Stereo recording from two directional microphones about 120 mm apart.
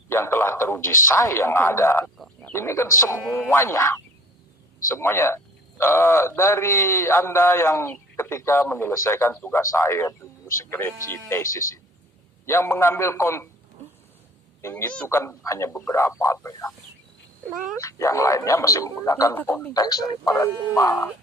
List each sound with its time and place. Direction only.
0.1 s a man's voice: 20° left (ahead or behind)
14.6 s speech: 20° left (ahead or behind)
17.7 s speech: 25° left (ahead or behind)
19.7 s a man's voice: 30° left (ahead or behind)